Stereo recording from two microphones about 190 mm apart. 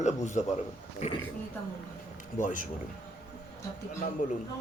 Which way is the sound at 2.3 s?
45° left (ahead or behind).